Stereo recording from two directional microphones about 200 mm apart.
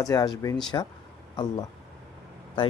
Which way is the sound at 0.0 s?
20° left (ahead or behind).